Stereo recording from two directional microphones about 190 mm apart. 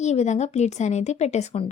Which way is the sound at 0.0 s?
35° left (ahead or behind).